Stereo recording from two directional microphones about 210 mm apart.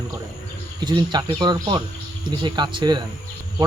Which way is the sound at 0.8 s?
20° right (ahead or behind).